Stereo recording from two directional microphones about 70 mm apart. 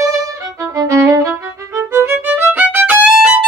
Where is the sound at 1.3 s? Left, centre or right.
Right.